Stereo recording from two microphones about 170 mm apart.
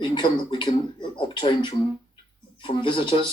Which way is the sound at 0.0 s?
25° left (ahead or behind).